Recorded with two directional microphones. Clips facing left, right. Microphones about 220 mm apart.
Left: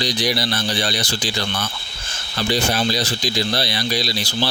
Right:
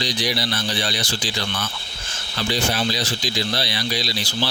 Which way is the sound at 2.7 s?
40° left (ahead or behind).